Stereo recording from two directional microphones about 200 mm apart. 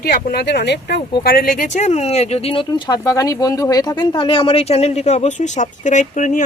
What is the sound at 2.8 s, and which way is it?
Speech, 15° left (ahead or behind).